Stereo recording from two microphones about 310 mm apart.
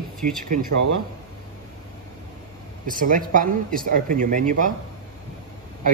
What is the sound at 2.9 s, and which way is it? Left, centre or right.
Speech, right.